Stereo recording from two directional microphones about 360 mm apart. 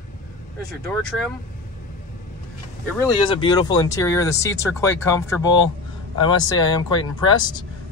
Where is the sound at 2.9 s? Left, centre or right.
Centre.